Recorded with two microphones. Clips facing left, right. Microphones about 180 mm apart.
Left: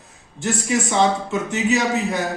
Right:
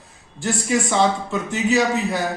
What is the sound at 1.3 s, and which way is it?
Speech, 20° left (ahead or behind).